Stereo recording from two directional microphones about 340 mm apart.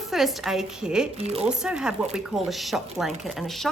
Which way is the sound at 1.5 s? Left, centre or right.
Centre.